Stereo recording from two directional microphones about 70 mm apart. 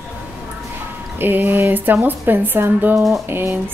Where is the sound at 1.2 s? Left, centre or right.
Right.